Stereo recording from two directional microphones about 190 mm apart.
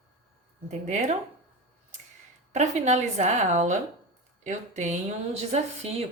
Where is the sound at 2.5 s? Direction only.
35° right (ahead or behind).